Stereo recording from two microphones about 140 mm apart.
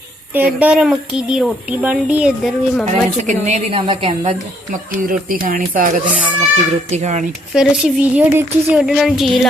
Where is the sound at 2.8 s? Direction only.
55° right (ahead or behind); by 4.3 s 40° right (ahead or behind).